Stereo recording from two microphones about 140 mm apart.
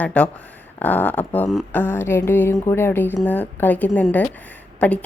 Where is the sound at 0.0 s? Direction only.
10° left (ahead or behind).